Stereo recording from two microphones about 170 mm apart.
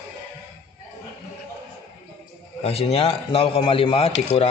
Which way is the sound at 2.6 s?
35° left (ahead or behind).